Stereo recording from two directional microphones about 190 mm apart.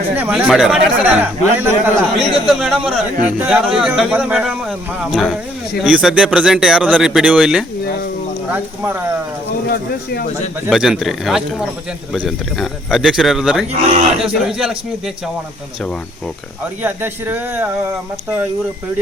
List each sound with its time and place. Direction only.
0.2 s speech: 5° right (ahead or behind)
9.6 s speech: 55° left (ahead or behind)
10.7 s speech: centre (ahead or behind)
13.7 s speech: 35° right (ahead or behind)
14.3 s speech: 5° right (ahead or behind)
16.8 s speech: 10° right (ahead or behind)